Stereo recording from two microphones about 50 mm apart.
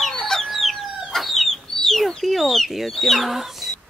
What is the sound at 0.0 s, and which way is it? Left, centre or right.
Chicken, centre.